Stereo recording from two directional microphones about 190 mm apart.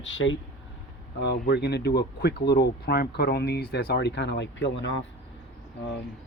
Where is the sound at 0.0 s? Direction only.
85° left.